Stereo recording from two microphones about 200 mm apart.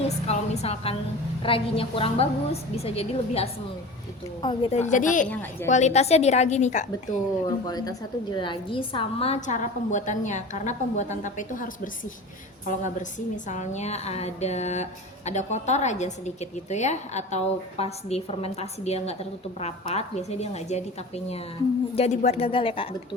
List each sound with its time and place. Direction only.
0.3 s a woman's voice: 30° left (ahead or behind)
5.2 s a woman's voice: 10° left (ahead or behind)
5.6 s a woman's voice: 35° left (ahead or behind)
7.6 s a woman's voice: 20° left (ahead or behind)
21.9 s a woman's voice: 35° left (ahead or behind)